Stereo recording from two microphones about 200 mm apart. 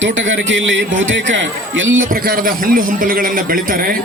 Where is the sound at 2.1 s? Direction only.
45° right (ahead or behind).